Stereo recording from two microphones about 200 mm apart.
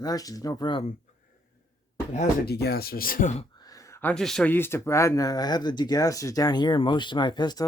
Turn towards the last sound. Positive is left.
turn(degrees=20)  # may be behind; listen again after turning